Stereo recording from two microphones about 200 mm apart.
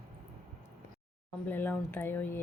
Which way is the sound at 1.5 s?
10° left (ahead or behind).